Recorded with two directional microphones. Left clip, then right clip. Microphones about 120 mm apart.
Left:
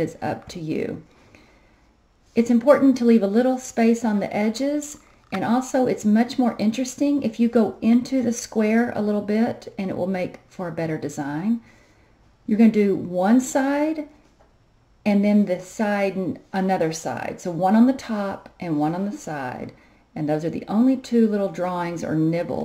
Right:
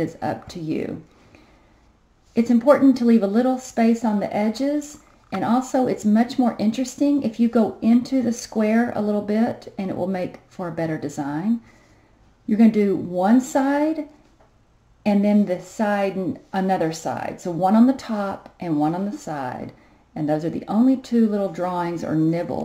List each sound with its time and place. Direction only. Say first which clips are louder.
0.0 s speech: even; 10° left (ahead or behind)
15.3 s speech: even; 15° left (ahead or behind)
17.6 s speech: right 1 dB; centre (ahead or behind)
17.9 s speech: right 1 dB; 15° left (ahead or behind)
18.7 s speech: right 2 dB; 5° left (ahead or behind)